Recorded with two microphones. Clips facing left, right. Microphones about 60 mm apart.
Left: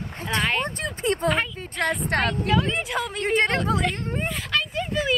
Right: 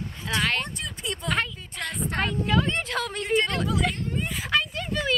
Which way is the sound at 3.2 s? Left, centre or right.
Left.